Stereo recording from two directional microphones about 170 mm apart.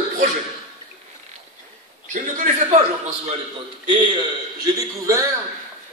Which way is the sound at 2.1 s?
50° right (ahead or behind).